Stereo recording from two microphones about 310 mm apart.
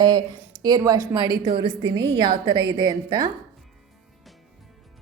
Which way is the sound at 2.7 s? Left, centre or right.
Centre.